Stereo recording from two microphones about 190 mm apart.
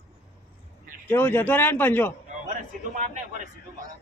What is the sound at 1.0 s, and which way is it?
A man's voice, 10° left (ahead or behind).